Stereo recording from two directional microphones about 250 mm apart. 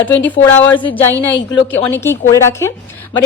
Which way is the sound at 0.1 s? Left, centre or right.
Centre.